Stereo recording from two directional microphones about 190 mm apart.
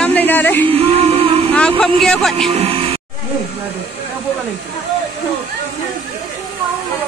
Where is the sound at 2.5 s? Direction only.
30° right (ahead or behind).